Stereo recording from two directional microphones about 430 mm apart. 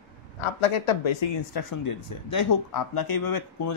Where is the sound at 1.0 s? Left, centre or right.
Left.